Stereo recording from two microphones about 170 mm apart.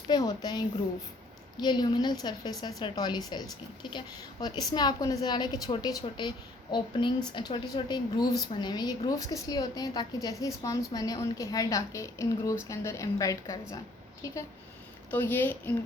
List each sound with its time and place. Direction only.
0.1 s a woman's voice: 25° left (ahead or behind)
15.1 s a woman's voice: 10° left (ahead or behind)